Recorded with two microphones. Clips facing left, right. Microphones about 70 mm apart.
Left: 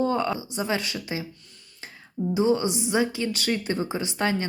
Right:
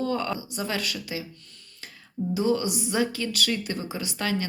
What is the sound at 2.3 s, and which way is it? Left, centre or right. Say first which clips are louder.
Speech: left 2 dB; left.